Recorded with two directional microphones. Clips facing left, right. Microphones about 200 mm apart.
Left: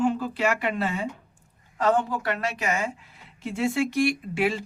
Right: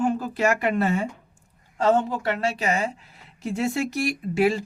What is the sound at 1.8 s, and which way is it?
A woman's voice, 25° right (ahead or behind).